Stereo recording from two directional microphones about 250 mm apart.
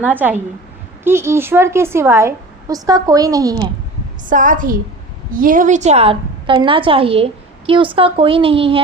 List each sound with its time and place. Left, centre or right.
0.0 s a woman's voice: centre
4.3 s a woman's voice: right